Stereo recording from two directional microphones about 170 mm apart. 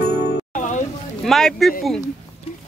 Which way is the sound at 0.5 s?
45° left (ahead or behind).